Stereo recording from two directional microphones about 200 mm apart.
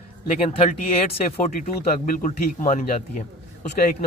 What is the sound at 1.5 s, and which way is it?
A man's voice, 40° left (ahead or behind).